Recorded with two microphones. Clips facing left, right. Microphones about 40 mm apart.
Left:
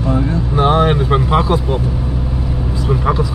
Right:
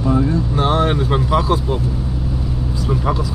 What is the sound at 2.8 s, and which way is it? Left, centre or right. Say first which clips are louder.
Speech: left 4 dB; left.